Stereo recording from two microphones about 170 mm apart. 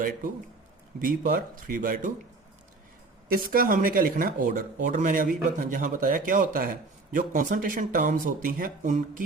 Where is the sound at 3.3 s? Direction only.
60° right (ahead or behind).